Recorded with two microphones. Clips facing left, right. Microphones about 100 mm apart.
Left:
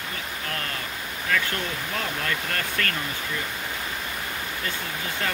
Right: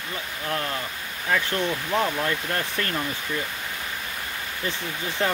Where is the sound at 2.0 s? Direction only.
25° right (ahead or behind).